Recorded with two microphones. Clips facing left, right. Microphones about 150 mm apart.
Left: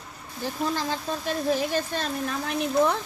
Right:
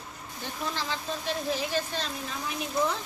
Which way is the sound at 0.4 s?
45° left (ahead or behind).